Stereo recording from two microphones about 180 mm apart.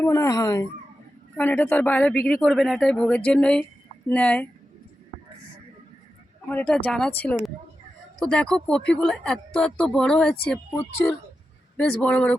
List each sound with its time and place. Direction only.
0.0 s speech: 15° left (ahead or behind)
1.4 s speech: 10° left (ahead or behind)
6.5 s speech: 10° left (ahead or behind)